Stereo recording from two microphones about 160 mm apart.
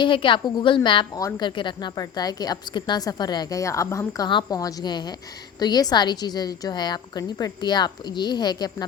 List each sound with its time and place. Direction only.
0.0 s a woman's voice: 30° left (ahead or behind)